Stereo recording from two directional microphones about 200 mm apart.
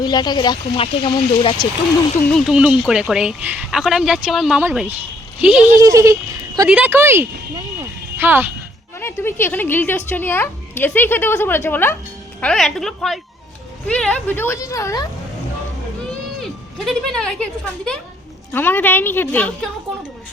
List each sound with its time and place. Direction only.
0.0 s speech: 20° left (ahead or behind)
2.3 s speech: 5° right (ahead or behind)
5.7 s speech: 15° right (ahead or behind)
7.5 s a sound: 10° right (ahead or behind)
9.0 s a woman's voice: 10° left (ahead or behind)
16.4 s a woman's voice: centre (ahead or behind)